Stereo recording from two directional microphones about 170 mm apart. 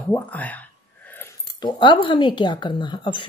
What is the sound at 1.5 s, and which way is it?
A woman's voice, 25° left (ahead or behind).